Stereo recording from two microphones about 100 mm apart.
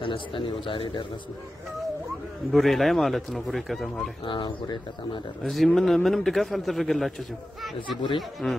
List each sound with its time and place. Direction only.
0.0 s speech: 60° left (ahead or behind)
2.5 s a man's voice: centre (ahead or behind)
4.3 s speech: 50° left (ahead or behind)
5.4 s a man's voice: centre (ahead or behind)
8.4 s a man's voice: 5° left (ahead or behind)